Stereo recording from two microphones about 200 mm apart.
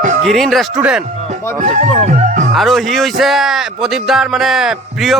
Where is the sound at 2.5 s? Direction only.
Centre (ahead or behind).